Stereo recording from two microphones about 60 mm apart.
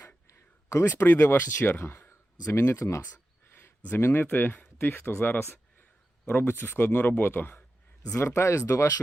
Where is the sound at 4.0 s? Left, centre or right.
Left.